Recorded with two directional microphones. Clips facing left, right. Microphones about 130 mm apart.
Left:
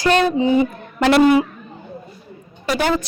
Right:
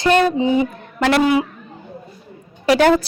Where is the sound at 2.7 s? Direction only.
70° right (ahead or behind).